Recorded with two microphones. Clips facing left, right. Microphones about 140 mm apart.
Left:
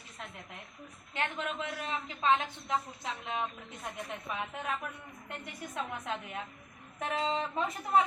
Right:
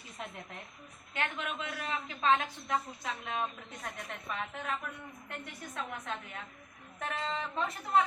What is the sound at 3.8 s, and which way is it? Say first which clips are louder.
A woman's voice: left 3 dB; 5° left (ahead or behind).